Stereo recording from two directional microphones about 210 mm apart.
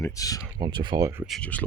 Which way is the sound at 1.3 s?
5° left (ahead or behind).